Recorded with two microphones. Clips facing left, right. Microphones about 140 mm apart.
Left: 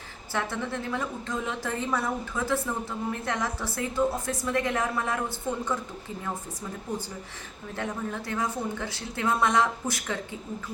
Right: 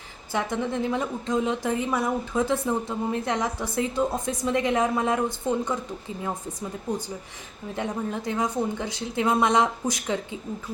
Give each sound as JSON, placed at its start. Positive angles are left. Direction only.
{"t": 0.3, "sound": "a woman's voice", "side_deg": -15}
{"t": 7.8, "sound": "a woman's voice", "side_deg": -20}